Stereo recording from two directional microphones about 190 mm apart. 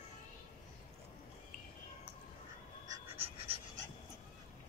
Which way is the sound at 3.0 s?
30° right (ahead or behind).